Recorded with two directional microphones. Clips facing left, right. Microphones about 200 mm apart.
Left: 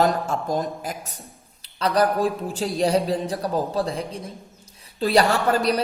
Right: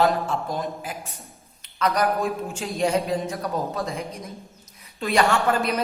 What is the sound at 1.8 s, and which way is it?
Speech, 30° left (ahead or behind).